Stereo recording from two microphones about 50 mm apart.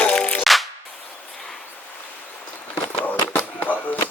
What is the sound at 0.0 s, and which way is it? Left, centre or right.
Music, left.